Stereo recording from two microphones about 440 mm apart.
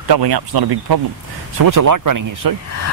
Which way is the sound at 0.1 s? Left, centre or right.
Right.